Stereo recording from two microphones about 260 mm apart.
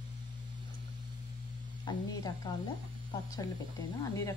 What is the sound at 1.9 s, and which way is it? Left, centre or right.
Speech, centre.